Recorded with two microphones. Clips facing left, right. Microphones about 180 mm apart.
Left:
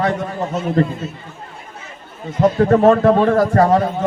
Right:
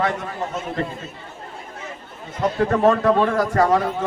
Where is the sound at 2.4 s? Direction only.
30° left (ahead or behind).